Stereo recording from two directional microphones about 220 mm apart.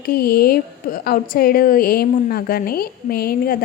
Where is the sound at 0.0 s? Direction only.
45° left (ahead or behind).